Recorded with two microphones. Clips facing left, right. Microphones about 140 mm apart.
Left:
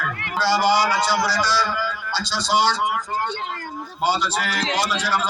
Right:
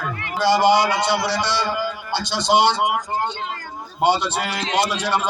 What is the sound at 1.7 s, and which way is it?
Speech, 55° right (ahead or behind).